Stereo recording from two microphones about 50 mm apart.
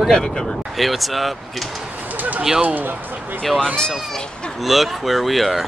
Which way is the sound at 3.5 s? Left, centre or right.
Centre.